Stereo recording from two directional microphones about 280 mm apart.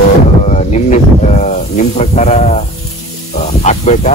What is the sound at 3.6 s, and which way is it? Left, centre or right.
Speech, left.